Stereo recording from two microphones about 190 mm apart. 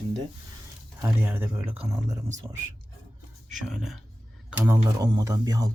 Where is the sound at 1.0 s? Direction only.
10° right (ahead or behind).